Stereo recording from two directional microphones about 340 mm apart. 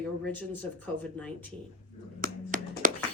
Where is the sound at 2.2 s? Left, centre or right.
Right.